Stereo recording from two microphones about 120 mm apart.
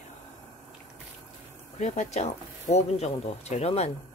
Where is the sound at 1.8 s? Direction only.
75° left (ahead or behind).